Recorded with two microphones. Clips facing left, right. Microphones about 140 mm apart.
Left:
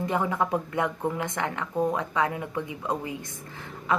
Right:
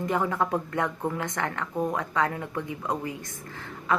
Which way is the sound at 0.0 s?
15° left (ahead or behind).